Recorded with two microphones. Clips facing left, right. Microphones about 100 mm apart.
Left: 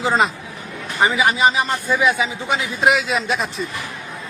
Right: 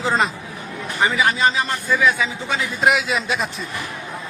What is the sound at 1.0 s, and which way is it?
A man's voice, 15° left (ahead or behind).